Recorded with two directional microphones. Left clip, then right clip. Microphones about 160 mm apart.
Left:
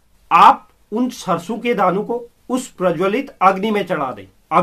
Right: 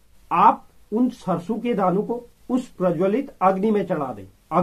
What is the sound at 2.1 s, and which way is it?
Speech, 15° left (ahead or behind).